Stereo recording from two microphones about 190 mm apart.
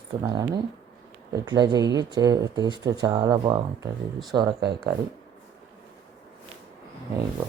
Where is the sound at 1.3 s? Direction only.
20° right (ahead or behind).